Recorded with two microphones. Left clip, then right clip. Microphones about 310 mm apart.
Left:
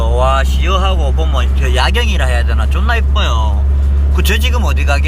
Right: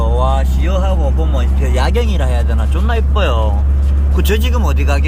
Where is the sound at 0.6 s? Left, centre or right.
Left.